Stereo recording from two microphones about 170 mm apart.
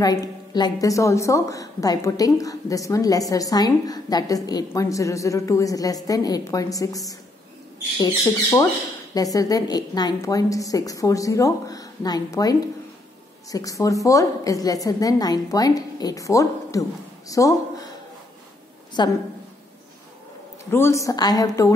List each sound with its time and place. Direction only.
0.0 s a woman's voice: 20° left (ahead or behind)
19.0 s a woman's voice: 25° left (ahead or behind)
20.7 s a woman's voice: 15° left (ahead or behind)